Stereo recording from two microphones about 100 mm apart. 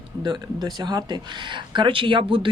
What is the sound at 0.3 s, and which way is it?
Speech, 45° right (ahead or behind).